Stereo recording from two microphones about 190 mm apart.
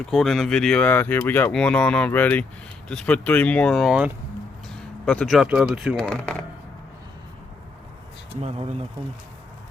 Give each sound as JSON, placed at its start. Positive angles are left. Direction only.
{"t": 0.0, "sound": "speech", "side_deg": 0}
{"t": 8.4, "sound": "speech", "side_deg": -35}